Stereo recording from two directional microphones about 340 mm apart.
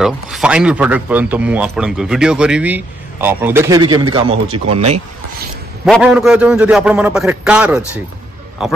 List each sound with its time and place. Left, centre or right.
0.0 s a man's voice: centre
5.9 s a man's voice: centre